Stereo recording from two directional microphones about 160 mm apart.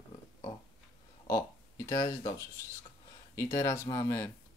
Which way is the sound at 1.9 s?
20° left (ahead or behind).